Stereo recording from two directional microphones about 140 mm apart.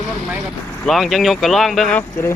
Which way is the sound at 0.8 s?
Centre (ahead or behind).